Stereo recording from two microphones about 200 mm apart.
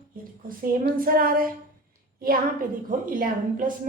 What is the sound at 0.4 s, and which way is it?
A woman's voice, 45° right (ahead or behind).